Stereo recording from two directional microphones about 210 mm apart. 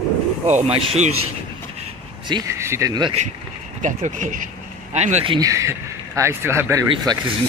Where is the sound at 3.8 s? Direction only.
35° right (ahead or behind).